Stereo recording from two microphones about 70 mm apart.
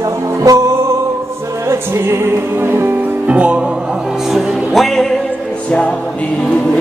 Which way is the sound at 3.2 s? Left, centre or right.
Centre.